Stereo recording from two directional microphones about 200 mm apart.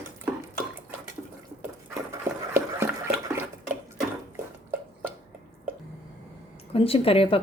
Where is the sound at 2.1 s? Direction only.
10° right (ahead or behind).